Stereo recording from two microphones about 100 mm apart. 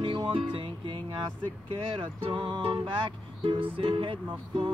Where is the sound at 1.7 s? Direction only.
65° right (ahead or behind).